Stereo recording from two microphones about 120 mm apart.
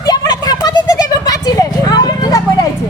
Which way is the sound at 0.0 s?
35° left (ahead or behind).